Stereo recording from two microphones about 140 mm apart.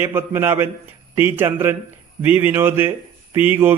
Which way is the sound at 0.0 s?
15° right (ahead or behind).